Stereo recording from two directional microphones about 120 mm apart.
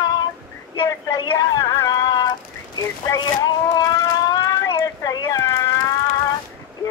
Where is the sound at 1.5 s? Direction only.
30° left (ahead or behind).